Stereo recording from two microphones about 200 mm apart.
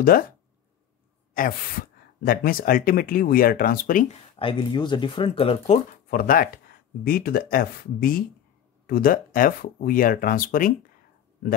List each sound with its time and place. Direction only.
0.0 s speech: 45° left (ahead or behind)
1.3 s speech: 45° left (ahead or behind)
4.4 s speech: 25° left (ahead or behind)
6.0 s speech: 45° left (ahead or behind)